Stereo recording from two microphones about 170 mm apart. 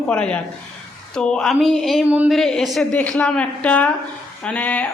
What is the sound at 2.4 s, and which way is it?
A woman's voice, 5° left (ahead or behind).